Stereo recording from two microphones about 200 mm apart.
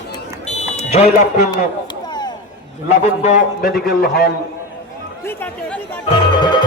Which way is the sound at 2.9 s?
40° left (ahead or behind).